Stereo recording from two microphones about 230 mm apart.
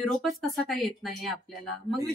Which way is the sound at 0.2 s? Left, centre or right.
Centre.